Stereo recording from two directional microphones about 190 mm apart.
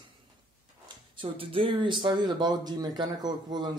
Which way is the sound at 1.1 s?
30° right (ahead or behind).